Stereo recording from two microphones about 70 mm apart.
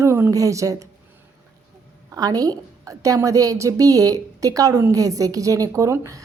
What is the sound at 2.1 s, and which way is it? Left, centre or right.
A woman's voice, right.